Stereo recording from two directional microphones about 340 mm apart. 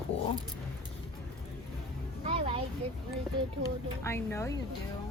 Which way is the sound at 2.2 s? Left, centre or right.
Centre.